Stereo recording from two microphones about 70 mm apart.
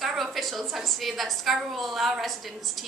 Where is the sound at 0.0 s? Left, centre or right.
Centre.